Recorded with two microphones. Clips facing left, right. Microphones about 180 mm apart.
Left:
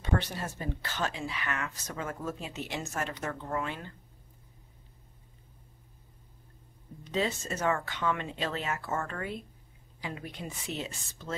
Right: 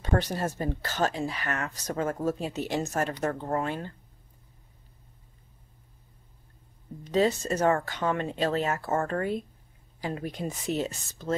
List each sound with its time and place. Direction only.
0.0 s speech: 40° right (ahead or behind)
7.1 s speech: 40° right (ahead or behind)